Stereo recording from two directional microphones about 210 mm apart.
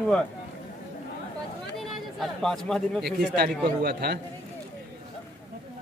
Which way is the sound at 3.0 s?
50° right (ahead or behind).